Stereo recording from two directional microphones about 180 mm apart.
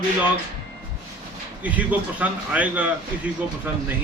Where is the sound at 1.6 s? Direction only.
10° right (ahead or behind).